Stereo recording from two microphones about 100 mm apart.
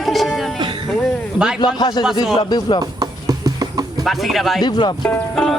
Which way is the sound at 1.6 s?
45° left (ahead or behind).